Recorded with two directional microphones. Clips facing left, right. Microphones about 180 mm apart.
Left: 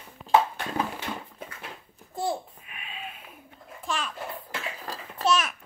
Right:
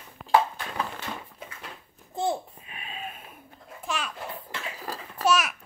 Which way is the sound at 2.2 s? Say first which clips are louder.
Right 2 dB; 20° right (ahead or behind).